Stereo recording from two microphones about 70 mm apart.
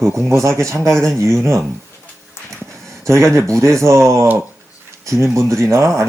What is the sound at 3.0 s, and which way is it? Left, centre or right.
Speech, right.